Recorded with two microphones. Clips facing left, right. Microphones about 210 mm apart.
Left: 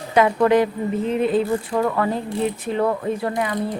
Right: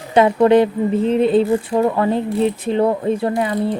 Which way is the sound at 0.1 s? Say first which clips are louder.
Right 4 dB; 25° right (ahead or behind).